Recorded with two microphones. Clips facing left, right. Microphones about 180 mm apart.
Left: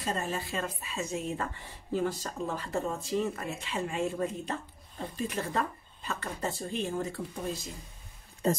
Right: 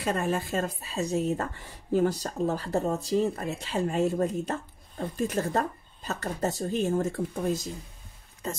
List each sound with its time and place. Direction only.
0.0 s speech: 60° right (ahead or behind)
8.4 s speech: 35° left (ahead or behind)